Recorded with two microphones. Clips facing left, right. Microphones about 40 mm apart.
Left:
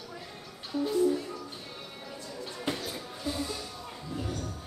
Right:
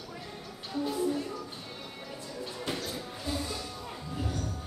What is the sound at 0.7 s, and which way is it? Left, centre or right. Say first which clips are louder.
Music: left 4 dB; centre.